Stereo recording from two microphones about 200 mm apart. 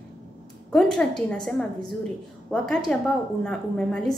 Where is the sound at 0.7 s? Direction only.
Centre (ahead or behind).